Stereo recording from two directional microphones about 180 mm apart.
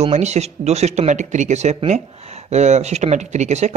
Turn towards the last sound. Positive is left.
turn(degrees=-40)  # may be behind; listen again after turning